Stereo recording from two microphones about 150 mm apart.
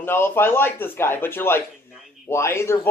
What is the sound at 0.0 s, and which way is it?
Speech, 15° left (ahead or behind).